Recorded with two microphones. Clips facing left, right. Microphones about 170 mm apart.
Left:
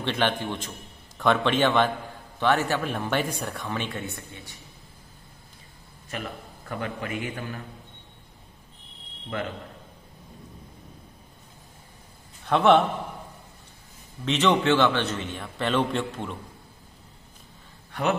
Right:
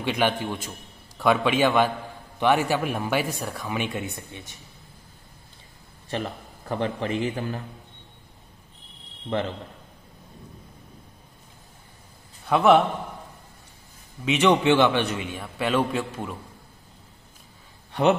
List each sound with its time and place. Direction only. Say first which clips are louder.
0.0 s a man's voice: right 2 dB; 10° right (ahead or behind)
6.0 s a man's voice: right 5 dB; 30° right (ahead or behind)
12.4 s a man's voice: right 1 dB; 5° right (ahead or behind)
14.2 s a man's voice: right 2 dB; 10° right (ahead or behind)